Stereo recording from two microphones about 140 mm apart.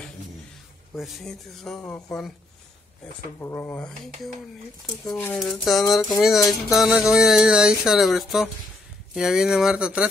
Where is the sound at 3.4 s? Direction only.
20° left (ahead or behind).